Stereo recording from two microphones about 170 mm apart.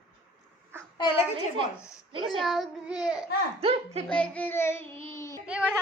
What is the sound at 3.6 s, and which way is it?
Speech, 35° right (ahead or behind).